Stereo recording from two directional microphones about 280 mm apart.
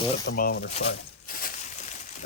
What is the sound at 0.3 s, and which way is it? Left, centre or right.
Speech, left.